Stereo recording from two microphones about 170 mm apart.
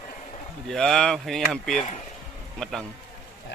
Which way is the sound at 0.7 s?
Centre (ahead or behind).